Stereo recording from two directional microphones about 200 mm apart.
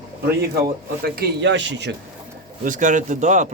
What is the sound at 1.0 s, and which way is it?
Speech, 50° right (ahead or behind).